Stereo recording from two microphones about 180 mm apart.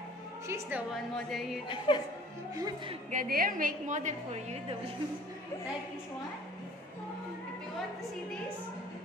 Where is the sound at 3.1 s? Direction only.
50° right (ahead or behind).